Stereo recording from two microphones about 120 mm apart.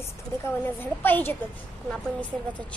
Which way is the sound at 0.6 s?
15° left (ahead or behind).